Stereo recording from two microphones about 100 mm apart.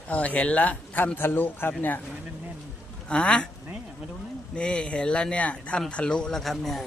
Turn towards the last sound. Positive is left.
turn(degrees=0)  # may be behind; listen again after turning